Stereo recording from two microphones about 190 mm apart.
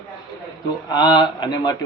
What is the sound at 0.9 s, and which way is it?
Speech, 20° left (ahead or behind).